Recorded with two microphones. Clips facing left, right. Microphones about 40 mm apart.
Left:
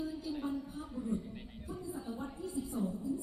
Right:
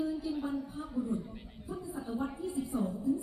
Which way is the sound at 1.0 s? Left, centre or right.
Centre.